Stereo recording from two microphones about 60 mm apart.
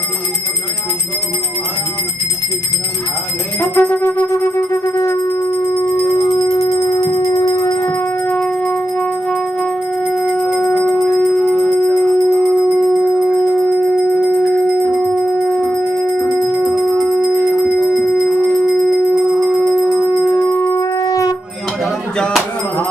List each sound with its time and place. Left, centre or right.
3.7 s music: left
4.3 s music: left
6.3 s music: left
9.3 s music: centre
15.4 s howl: centre
16.3 s music: centre
18.7 s a sound: centre
19.7 s music: centre
20.2 s music: centre
20.6 s howl: left
21.0 s shofar: left